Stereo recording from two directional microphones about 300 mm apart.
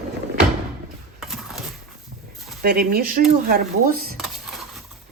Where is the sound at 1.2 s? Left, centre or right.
Centre.